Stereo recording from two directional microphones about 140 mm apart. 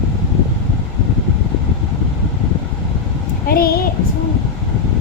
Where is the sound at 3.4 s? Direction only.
90° left.